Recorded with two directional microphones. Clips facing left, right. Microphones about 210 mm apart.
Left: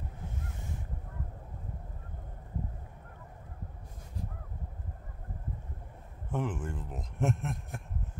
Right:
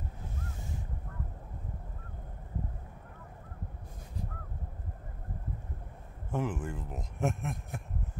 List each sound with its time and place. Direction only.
6.3 s a man's voice: centre (ahead or behind)